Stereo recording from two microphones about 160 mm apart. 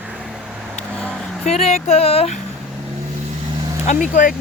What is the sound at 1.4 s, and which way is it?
Speech, 40° left (ahead or behind).